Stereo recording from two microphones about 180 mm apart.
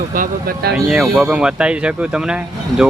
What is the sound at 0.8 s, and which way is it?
Speech, 5° right (ahead or behind).